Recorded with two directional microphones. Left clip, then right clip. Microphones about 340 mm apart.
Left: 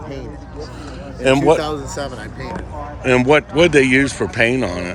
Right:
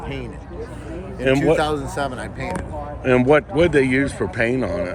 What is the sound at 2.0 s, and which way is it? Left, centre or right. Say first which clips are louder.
Speech: right 2 dB; right.